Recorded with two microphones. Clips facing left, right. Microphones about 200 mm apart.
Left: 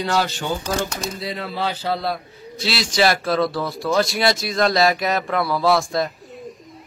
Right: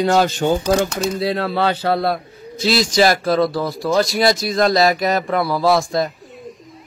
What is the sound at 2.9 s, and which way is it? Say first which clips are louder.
Speech: right 1 dB; 40° right (ahead or behind).